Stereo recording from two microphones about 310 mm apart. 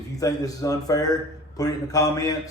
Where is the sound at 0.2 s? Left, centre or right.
Centre.